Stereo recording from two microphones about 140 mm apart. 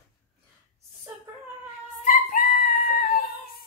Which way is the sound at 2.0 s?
75° left (ahead or behind).